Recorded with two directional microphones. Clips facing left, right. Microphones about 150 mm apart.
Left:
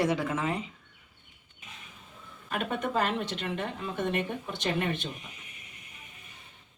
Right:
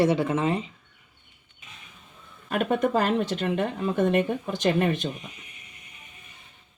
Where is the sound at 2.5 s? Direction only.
45° right (ahead or behind).